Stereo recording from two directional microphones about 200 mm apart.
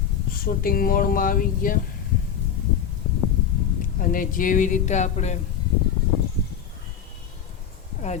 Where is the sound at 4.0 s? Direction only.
45° left (ahead or behind).